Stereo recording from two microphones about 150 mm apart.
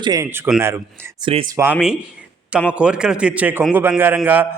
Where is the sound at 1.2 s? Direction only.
35° right (ahead or behind).